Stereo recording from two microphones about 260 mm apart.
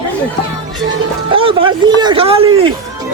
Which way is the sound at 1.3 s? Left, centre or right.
Centre.